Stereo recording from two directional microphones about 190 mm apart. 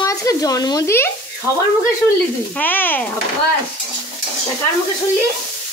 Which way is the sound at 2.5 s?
10° left (ahead or behind).